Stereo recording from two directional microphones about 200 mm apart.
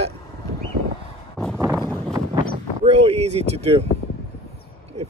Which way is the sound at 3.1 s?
30° right (ahead or behind).